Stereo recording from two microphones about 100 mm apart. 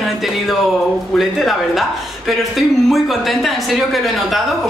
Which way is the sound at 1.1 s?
Centre (ahead or behind).